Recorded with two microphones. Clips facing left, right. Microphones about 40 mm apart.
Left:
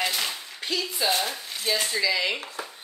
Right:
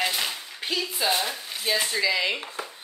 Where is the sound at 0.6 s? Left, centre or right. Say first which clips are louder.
Even; centre.